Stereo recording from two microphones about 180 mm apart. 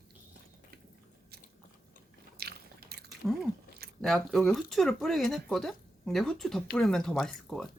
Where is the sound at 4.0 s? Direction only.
Centre (ahead or behind).